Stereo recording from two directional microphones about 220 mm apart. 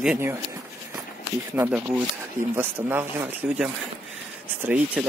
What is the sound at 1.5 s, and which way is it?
Speech, 10° right (ahead or behind).